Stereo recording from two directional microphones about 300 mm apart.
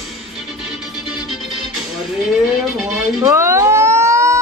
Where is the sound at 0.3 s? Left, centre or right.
Centre.